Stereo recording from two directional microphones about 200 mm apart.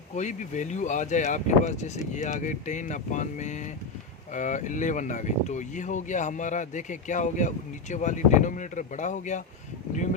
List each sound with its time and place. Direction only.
0.2 s speech: 35° left (ahead or behind)